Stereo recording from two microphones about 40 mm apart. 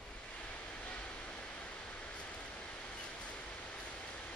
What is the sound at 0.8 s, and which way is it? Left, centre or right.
Vehicle, left.